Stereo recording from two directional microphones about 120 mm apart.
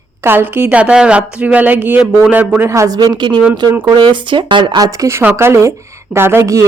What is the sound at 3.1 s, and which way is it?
A woman's voice, 40° right (ahead or behind).